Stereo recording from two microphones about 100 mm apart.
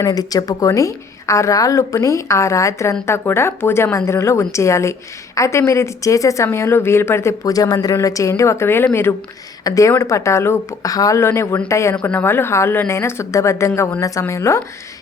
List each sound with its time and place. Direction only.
0.0 s a woman's voice: 40° left (ahead or behind); by 9.1 s 25° left (ahead or behind)
9.6 s a woman's voice: 35° left (ahead or behind)
10.8 s a woman's voice: 35° left (ahead or behind)